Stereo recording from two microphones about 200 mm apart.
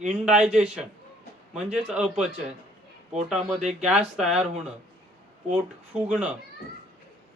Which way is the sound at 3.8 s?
5° right (ahead or behind).